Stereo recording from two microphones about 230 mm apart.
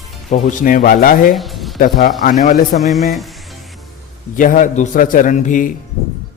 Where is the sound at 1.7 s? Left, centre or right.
Left.